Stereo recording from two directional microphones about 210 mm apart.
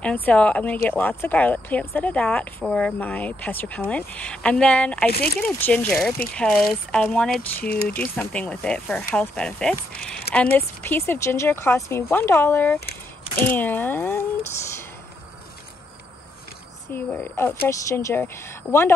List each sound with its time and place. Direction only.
0.0 s speech: 5° left (ahead or behind)
7.7 s speech: 45° left (ahead or behind)
8.2 s speech: 5° left (ahead or behind)
16.9 s speech: 10° left (ahead or behind)